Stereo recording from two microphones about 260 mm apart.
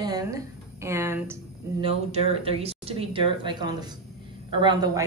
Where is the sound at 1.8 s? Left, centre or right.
Right.